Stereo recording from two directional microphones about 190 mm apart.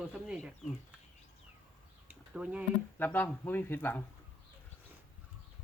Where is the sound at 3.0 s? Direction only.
10° left (ahead or behind).